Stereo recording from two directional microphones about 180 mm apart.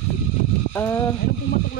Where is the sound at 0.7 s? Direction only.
15° left (ahead or behind).